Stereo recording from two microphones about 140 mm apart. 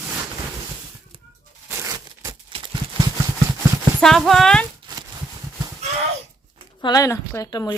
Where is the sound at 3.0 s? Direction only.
40° right (ahead or behind).